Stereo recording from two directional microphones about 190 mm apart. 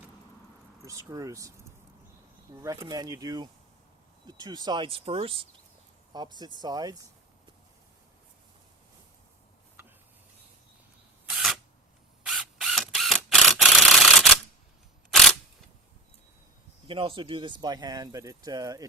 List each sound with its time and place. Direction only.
0.9 s speech: 15° right (ahead or behind)
2.6 s speech: 15° right (ahead or behind)
11.3 s camera: centre (ahead or behind)
16.8 s speech: 30° right (ahead or behind)